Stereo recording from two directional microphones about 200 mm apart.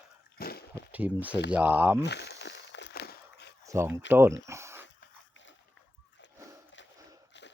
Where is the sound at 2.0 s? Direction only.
60° left (ahead or behind).